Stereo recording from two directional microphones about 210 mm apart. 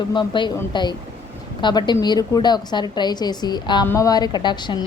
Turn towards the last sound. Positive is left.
turn(degrees=20)  # may be behind; listen again after turning